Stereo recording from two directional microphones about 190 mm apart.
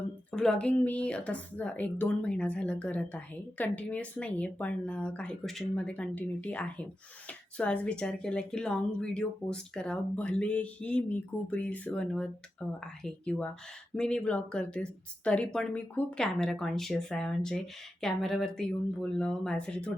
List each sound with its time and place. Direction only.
0.3 s speech: 5° left (ahead or behind)